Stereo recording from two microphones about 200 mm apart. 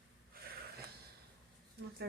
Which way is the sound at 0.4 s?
50° right (ahead or behind).